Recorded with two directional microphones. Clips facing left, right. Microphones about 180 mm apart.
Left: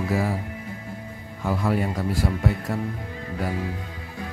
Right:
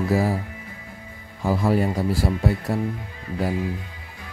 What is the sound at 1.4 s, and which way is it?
Speech, 35° right (ahead or behind).